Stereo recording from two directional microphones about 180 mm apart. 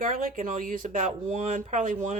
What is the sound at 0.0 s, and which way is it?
Speech, 50° right (ahead or behind).